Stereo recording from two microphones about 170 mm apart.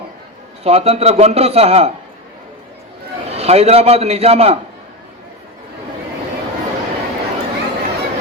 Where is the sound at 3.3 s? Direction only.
35° right (ahead or behind).